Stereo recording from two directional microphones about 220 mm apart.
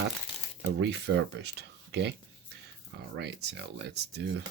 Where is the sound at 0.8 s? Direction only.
50° right (ahead or behind).